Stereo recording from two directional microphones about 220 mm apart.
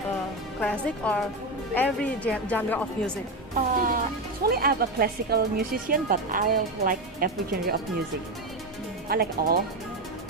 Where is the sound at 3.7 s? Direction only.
40° right (ahead or behind).